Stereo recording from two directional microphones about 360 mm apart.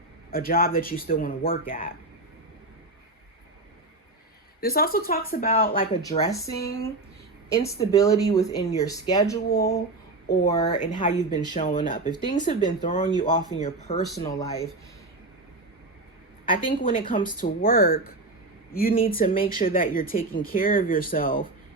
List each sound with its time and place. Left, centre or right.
0.3 s speech: left
4.6 s speech: left
6.1 s speech: centre
7.5 s speech: centre
9.5 s speech: left
10.4 s speech: centre
16.5 s speech: left